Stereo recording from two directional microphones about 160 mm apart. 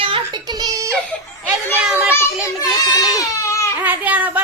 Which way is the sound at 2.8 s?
25° left (ahead or behind).